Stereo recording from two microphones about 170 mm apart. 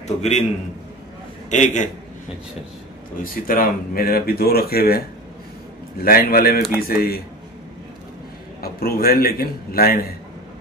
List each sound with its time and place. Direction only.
0.0 s a man's voice: 40° left (ahead or behind)
1.5 s a man's voice: 45° left (ahead or behind)
3.4 s speech: 55° left (ahead or behind)
6.0 s speech: 60° left (ahead or behind)
8.7 s speech: 60° left (ahead or behind)